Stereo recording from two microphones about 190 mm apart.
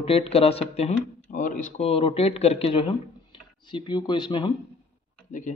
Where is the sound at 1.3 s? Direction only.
45° left (ahead or behind).